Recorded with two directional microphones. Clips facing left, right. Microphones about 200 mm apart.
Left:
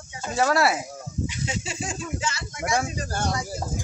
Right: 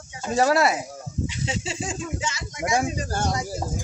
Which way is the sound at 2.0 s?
20° right (ahead or behind).